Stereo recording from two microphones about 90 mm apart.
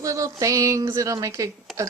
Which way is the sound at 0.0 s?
35° right (ahead or behind).